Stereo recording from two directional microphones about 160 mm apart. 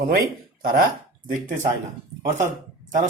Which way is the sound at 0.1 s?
65° right (ahead or behind).